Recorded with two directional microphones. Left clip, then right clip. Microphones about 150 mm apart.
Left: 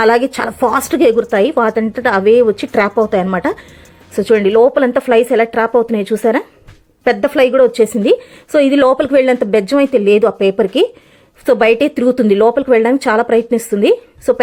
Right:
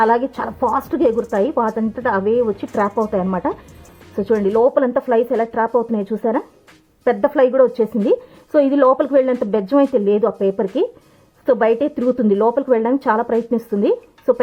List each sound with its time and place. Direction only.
0.0 s a woman's voice: 15° left (ahead or behind)